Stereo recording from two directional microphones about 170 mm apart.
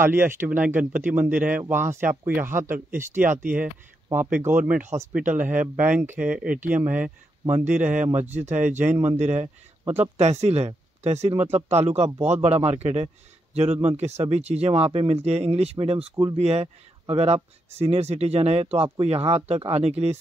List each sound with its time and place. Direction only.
0.0 s speech: 15° right (ahead or behind)
5.1 s speech: 50° right (ahead or behind)
5.8 s speech: 10° right (ahead or behind)
7.8 s speech: 50° right (ahead or behind)
8.9 s speech: 15° right (ahead or behind)
9.2 s speech: 40° right (ahead or behind)